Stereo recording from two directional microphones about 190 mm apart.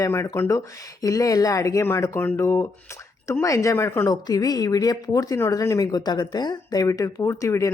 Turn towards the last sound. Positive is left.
turn(degrees=15)  # may be behind; listen again after turning